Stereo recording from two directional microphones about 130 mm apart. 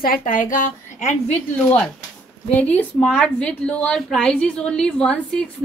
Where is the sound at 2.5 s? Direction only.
10° left (ahead or behind).